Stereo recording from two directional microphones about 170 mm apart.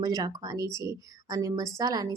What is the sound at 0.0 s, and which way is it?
A woman's voice, 20° right (ahead or behind).